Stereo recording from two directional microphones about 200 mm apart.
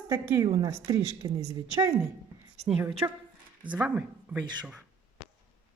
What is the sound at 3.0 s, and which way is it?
Speech, 15° right (ahead or behind).